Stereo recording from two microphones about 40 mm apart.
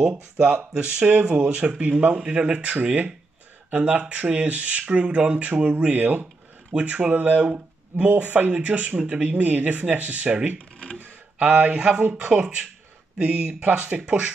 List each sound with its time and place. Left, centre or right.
0.0 s speech: right
5.9 s speech: right
8.5 s speech: right
9.4 s speech: right
10.6 s speech: left
11.3 s speech: right
11.7 s speech: right